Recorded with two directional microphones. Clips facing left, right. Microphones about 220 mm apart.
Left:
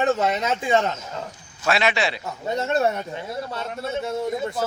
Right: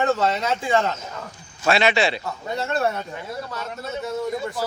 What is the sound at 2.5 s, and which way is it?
Speech, 20° left (ahead or behind).